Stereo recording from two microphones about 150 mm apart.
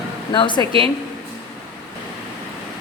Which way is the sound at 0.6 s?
35° right (ahead or behind).